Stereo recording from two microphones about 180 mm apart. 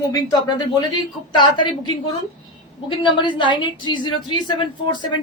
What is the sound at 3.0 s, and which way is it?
Speech, 25° left (ahead or behind).